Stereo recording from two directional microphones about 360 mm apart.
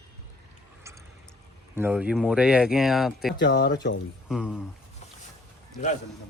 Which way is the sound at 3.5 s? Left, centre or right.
Left.